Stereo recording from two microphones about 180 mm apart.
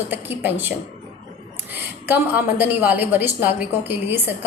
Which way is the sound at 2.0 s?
10° right (ahead or behind).